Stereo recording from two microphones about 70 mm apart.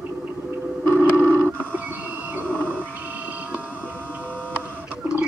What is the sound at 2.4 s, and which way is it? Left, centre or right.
Wild animals, left.